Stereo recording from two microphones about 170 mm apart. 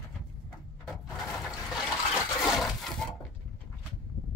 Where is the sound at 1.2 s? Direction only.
Centre (ahead or behind).